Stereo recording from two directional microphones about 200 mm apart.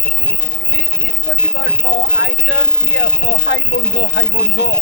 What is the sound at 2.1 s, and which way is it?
Speech, 65° left (ahead or behind).